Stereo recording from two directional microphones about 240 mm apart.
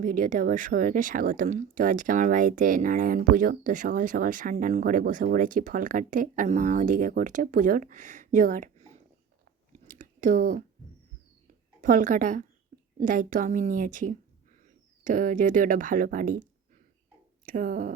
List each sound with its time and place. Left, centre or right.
0.0 s speech: right
9.7 s chewing: right
11.8 s speech: right
17.4 s speech: right